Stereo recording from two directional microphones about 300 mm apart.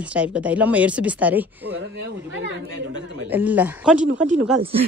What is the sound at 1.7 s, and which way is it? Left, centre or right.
Speech, right.